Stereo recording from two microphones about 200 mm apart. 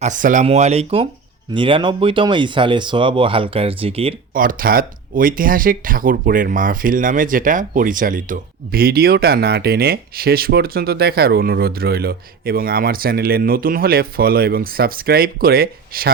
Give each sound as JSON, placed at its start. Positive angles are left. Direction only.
{"t": 0.0, "sound": "speech", "side_deg": -40}
{"t": 4.4, "sound": "speech", "side_deg": -45}